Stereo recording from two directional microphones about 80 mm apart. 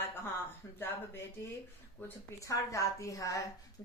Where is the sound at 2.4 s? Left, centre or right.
Left.